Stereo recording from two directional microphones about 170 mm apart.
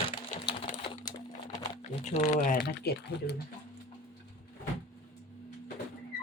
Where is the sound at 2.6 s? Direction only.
70° left (ahead or behind).